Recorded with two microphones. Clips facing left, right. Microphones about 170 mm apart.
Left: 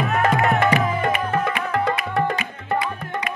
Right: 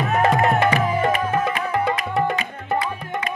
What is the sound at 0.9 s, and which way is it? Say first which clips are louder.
Music: right 2 dB; 15° right (ahead or behind).